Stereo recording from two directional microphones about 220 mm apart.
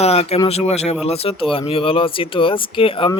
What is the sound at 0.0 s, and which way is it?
Speech, 30° left (ahead or behind).